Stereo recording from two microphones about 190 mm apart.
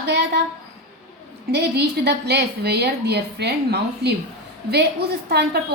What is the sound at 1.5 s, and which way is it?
A woman's voice, 60° right (ahead or behind).